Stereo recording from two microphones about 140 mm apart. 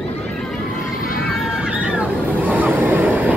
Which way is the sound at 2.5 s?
10° right (ahead or behind).